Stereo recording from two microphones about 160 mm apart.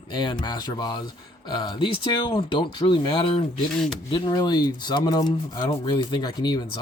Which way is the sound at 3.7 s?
5° left (ahead or behind).